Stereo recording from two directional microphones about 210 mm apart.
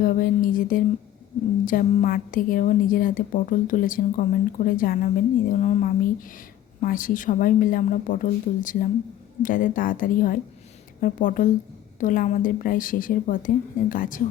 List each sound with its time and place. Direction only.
0.0 s a woman's voice: 40° left (ahead or behind)